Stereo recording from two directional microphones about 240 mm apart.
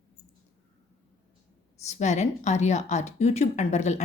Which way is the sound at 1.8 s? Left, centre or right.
Left.